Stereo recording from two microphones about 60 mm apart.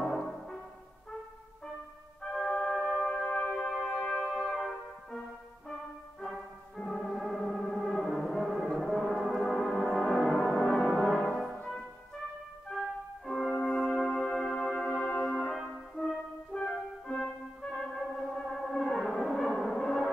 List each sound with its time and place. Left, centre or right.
0.0 s music: centre
2.3 s music: centre
3.1 s music: centre
6.2 s music: centre
7.7 s brass instrument: centre
11.4 s music: centre
13.7 s brass instrument: centre
16.5 s music: centre